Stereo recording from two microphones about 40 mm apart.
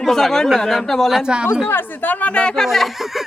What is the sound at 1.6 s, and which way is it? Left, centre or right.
Speech, left.